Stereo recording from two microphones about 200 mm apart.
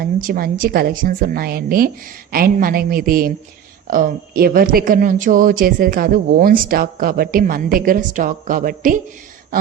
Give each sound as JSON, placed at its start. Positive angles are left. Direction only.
{"t": 0.0, "sound": "speech", "side_deg": -45}